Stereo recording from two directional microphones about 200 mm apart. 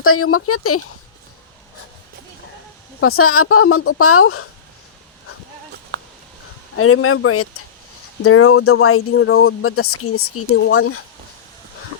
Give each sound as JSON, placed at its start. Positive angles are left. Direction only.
{"t": 0.0, "sound": "speech", "side_deg": 90}
{"t": 3.0, "sound": "speech", "side_deg": 90}
{"t": 5.9, "sound": "a sound", "side_deg": -60}
{"t": 6.7, "sound": "speech", "side_deg": 90}